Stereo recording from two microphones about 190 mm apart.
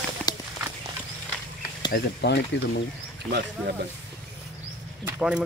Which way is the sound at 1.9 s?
60° left (ahead or behind).